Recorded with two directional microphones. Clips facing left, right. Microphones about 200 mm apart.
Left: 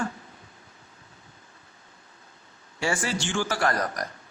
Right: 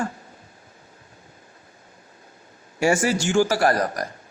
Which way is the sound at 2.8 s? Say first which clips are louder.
Right 8 dB; 45° right (ahead or behind).